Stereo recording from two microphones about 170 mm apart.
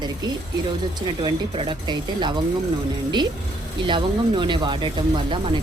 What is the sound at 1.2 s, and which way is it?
Speech, 25° right (ahead or behind).